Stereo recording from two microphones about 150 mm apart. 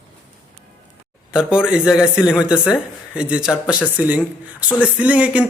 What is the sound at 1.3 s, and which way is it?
A man's voice, 5° right (ahead or behind).